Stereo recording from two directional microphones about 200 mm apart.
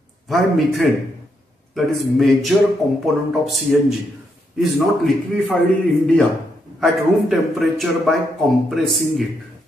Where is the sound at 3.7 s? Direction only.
Centre (ahead or behind).